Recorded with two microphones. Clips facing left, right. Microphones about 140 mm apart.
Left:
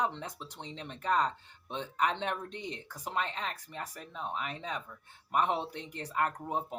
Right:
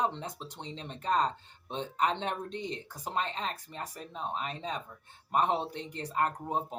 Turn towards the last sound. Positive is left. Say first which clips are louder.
# right 1 dB
turn(degrees=-30)  # may be behind; listen again after turning